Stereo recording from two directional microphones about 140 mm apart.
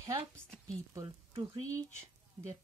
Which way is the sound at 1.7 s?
20° right (ahead or behind).